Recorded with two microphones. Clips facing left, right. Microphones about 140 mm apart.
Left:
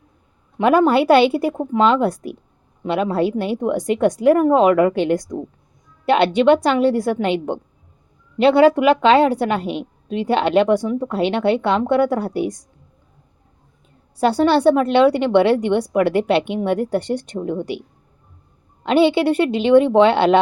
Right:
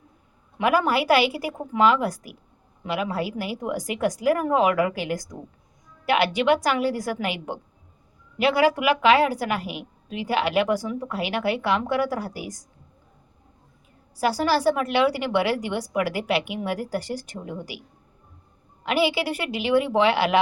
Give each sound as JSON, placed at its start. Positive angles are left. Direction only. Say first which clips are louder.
{"t": 0.6, "sound": "a woman's voice", "louder": "left 7 dB", "side_deg": 25}
{"t": 14.2, "sound": "a woman's voice", "louder": "left 7 dB", "side_deg": 25}
{"t": 18.9, "sound": "a woman's voice", "louder": "left 8 dB", "side_deg": 25}